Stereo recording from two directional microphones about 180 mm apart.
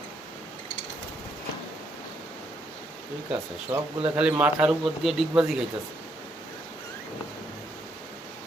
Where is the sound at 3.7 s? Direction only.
25° right (ahead or behind).